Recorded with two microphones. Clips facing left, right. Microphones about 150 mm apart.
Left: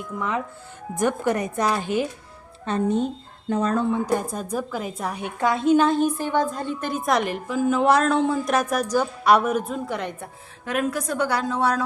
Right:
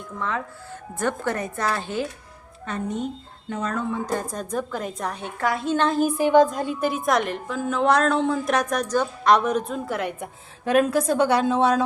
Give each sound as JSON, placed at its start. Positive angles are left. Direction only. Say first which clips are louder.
{"t": 0.2, "sound": "a woman's voice", "louder": "left 1 dB", "side_deg": 15}
{"t": 2.6, "sound": "speech", "louder": "left 5 dB", "side_deg": 30}
{"t": 3.9, "sound": "a woman's voice", "louder": "left 3 dB", "side_deg": 10}
{"t": 5.7, "sound": "a woman's voice", "louder": "left 1 dB", "side_deg": 0}
{"t": 10.7, "sound": "a woman's voice", "louder": "right 6 dB", "side_deg": -30}